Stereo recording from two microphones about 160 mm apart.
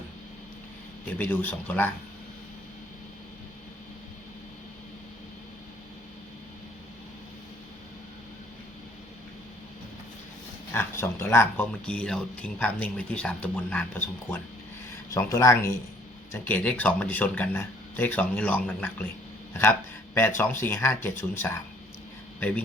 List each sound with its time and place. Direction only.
1.2 s speech: 10° left (ahead or behind)
10.7 s speech: 15° left (ahead or behind)
15.1 s speech: 20° left (ahead or behind)
20.1 s a man's voice: 15° left (ahead or behind)